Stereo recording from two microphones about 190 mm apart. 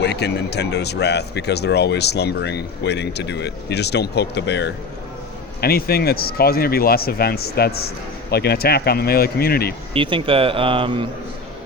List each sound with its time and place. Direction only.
0.0 s speech: 65° left (ahead or behind)
5.5 s speech: 55° left (ahead or behind)
9.9 s speech: 25° right (ahead or behind)